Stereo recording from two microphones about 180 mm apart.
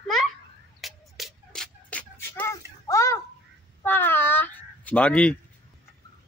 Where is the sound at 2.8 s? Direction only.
15° left (ahead or behind).